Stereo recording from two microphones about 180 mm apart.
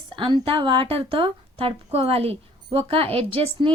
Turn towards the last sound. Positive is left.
turn(degrees=-30)  # may be behind; listen again after turning